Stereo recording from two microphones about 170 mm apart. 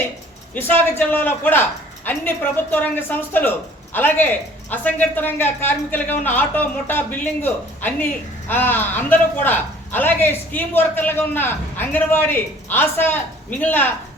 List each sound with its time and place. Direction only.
0.5 s a man's voice: 10° left (ahead or behind)